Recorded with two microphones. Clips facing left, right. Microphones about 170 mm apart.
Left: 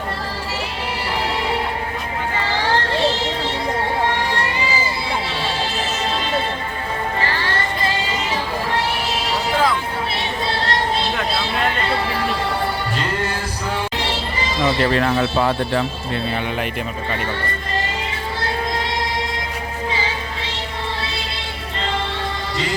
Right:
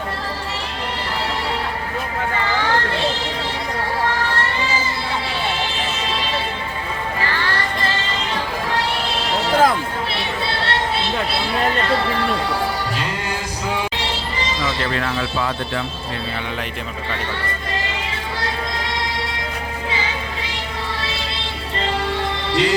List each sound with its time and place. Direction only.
7.2 s music: 30° left (ahead or behind)
9.5 s a sound: 45° right (ahead or behind)
14.9 s speech: 30° left (ahead or behind)